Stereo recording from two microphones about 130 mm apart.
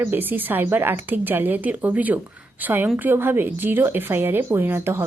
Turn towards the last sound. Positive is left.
turn(degrees=-15)  # may be behind; listen again after turning